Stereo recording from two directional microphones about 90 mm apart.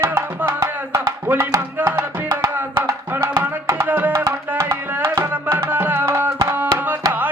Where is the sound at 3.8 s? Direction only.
20° right (ahead or behind).